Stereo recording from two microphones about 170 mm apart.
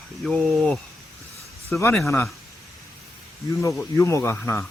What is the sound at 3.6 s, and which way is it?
Speech, 15° left (ahead or behind).